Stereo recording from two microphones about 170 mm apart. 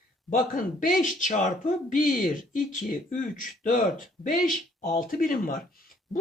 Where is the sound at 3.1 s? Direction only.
50° left (ahead or behind).